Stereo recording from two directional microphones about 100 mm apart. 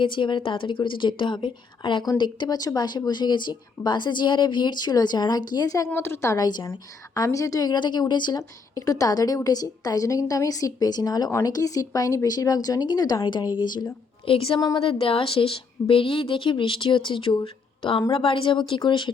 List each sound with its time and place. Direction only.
0.0 s a woman's voice: 55° left (ahead or behind); by 5.9 s 35° left (ahead or behind)
5.9 s a woman's voice: 25° left (ahead or behind)
6.3 s a woman's voice: 40° left (ahead or behind)
8.4 s a woman's voice: 35° left (ahead or behind)
14.3 s a woman's voice: 65° left (ahead or behind)